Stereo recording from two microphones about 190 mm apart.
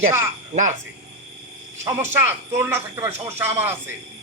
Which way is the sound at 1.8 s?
15° right (ahead or behind).